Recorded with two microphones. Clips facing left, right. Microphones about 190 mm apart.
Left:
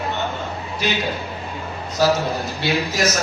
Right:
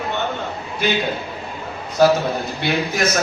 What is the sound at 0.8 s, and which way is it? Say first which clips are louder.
Speech: right 3 dB; 55° right (ahead or behind).